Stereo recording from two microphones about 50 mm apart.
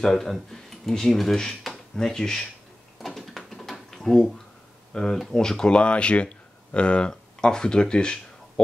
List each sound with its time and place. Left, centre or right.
0.0 s speech: centre
3.0 s drawer open or close: centre
4.9 s speech: centre